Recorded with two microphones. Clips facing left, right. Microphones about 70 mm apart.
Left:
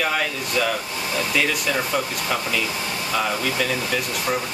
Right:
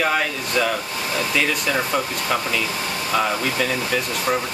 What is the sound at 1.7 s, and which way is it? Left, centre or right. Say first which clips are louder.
Speech: right 1 dB; centre.